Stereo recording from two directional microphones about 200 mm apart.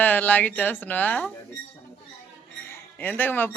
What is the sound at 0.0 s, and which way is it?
Speech, 10° left (ahead or behind).